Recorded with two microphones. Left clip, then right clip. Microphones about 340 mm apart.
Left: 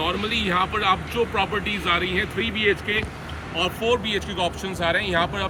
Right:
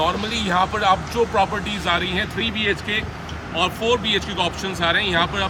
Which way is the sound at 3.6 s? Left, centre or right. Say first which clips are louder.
Right 2 dB; centre.